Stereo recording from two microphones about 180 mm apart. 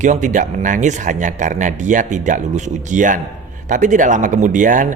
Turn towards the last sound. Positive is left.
turn(degrees=-45)  # may be behind; listen again after turning